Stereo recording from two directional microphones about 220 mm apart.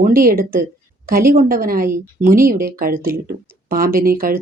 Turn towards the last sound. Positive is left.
turn(degrees=-40)  # may be behind; listen again after turning